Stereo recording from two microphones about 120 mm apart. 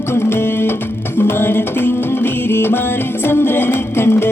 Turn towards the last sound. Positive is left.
turn(degrees=20)  # may be behind; listen again after turning